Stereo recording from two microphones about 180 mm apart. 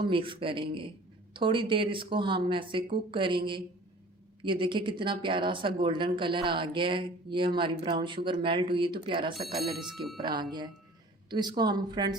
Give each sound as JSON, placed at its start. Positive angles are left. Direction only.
{"t": 0.0, "sound": "speech", "side_deg": -30}
{"t": 9.3, "sound": "speech", "side_deg": 0}
{"t": 11.3, "sound": "speech", "side_deg": -25}